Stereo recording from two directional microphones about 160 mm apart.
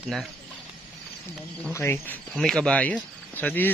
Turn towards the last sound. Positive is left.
turn(degrees=10)  # may be behind; listen again after turning